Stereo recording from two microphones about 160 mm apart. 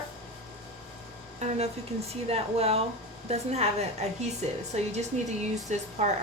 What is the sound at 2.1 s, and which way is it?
Speech, 40° right (ahead or behind).